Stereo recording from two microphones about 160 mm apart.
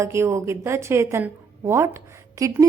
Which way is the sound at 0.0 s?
15° right (ahead or behind).